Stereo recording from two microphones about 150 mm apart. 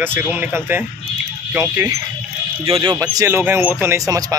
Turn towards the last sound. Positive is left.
turn(degrees=-20)  # may be behind; listen again after turning